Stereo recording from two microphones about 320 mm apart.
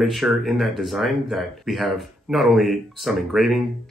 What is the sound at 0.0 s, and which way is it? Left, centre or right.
Speech, centre.